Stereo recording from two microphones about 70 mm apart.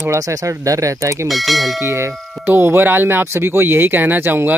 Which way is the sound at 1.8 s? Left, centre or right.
Right.